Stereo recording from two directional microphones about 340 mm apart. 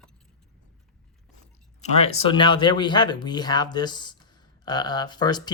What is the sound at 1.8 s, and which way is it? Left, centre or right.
Speech, centre.